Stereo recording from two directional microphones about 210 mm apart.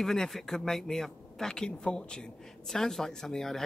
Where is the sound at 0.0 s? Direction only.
Centre (ahead or behind).